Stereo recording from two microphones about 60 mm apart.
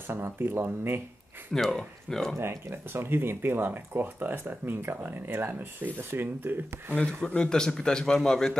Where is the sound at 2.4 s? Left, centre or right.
Right.